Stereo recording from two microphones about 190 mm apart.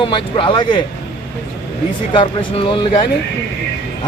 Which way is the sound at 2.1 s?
30° left (ahead or behind).